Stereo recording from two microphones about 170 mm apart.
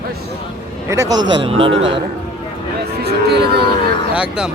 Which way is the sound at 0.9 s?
20° right (ahead or behind).